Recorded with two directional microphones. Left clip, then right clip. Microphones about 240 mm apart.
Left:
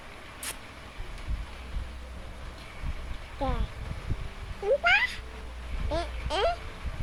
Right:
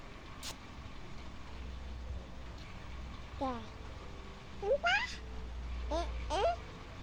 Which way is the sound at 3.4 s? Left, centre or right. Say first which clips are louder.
Left 5 dB; centre.